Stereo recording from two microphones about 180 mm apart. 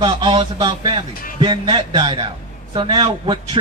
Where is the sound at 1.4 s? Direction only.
30° right (ahead or behind).